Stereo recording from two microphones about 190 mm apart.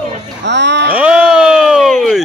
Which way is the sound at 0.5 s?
65° right (ahead or behind).